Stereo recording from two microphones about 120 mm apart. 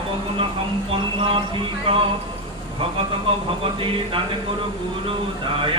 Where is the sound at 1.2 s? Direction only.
45° right (ahead or behind).